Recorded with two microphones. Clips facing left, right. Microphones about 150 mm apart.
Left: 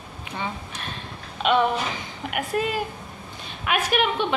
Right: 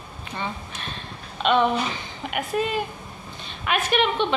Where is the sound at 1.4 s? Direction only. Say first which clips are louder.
Right 1 dB; 5° left (ahead or behind).